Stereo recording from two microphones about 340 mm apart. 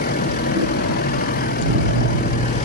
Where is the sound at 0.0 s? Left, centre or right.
Left.